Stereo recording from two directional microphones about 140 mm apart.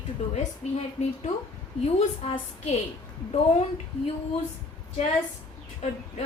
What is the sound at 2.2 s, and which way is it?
Speech, 50° left (ahead or behind).